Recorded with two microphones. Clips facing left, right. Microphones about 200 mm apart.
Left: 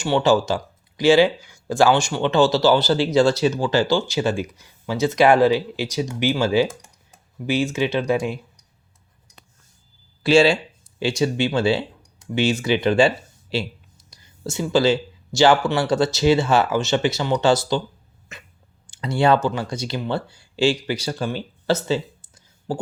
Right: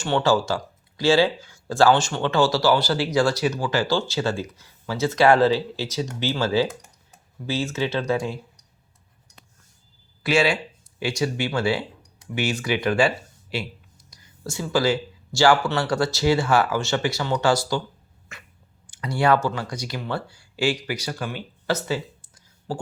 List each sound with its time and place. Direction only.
0.0 s speech: 15° left (ahead or behind)
10.2 s speech: 30° left (ahead or behind)
18.3 s dog: 20° left (ahead or behind)
18.9 s speech: 25° left (ahead or behind)